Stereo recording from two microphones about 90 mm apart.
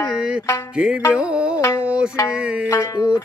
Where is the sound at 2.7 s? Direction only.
35° left (ahead or behind).